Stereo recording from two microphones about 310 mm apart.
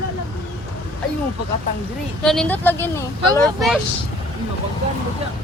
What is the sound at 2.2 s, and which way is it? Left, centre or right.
Speech, centre.